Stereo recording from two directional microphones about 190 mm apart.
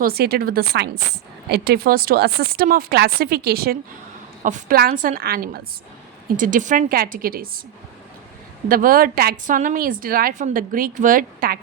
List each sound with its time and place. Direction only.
0.0 s speech: 55° right (ahead or behind)
6.3 s speech: 45° right (ahead or behind)
8.7 s speech: 50° right (ahead or behind)